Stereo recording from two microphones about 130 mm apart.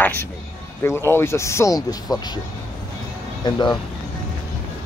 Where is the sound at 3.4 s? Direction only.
35° left (ahead or behind).